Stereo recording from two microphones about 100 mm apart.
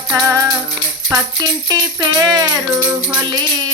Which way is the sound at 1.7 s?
40° right (ahead or behind).